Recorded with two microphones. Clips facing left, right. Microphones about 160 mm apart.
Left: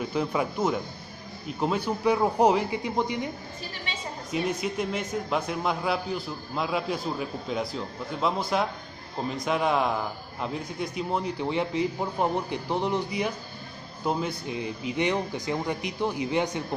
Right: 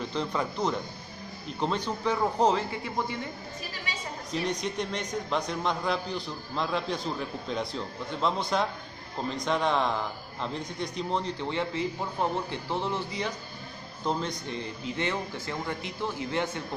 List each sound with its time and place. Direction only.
0.0 s a man's voice: 10° left (ahead or behind)
4.3 s a man's voice: 5° left (ahead or behind)